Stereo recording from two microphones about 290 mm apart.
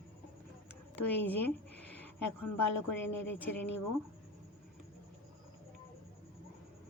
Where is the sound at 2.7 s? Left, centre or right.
Left.